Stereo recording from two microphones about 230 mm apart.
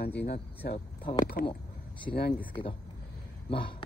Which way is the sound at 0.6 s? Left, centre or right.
Left.